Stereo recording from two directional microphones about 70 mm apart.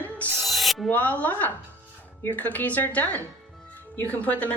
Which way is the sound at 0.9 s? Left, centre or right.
Left.